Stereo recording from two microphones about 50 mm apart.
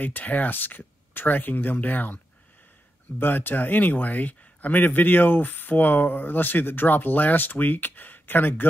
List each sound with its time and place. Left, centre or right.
0.0 s speech: left
3.2 s speech: left